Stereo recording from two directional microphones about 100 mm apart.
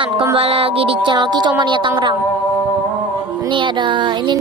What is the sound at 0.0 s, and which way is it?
A woman's voice, 60° right (ahead or behind).